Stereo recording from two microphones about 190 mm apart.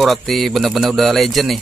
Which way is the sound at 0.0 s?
Centre (ahead or behind).